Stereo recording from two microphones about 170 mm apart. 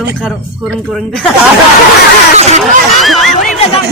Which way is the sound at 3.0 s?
Centre (ahead or behind).